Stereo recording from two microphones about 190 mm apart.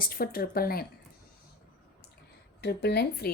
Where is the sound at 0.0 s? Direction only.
50° left (ahead or behind).